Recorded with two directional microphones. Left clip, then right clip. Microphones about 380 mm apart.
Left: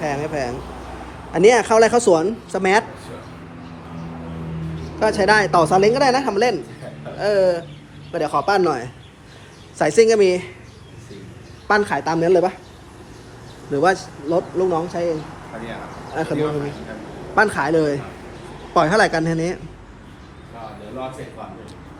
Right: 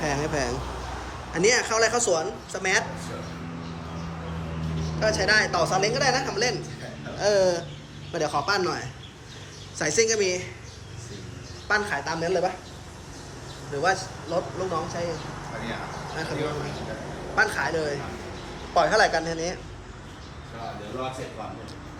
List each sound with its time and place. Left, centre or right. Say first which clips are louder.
0.0 s a man's voice: left 4 dB; centre
4.9 s a woman's voice: left 6 dB; centre
11.7 s a woman's voice: left 7 dB; centre
14.3 s speech: left 9 dB; left
16.1 s a woman's voice: left 9 dB; centre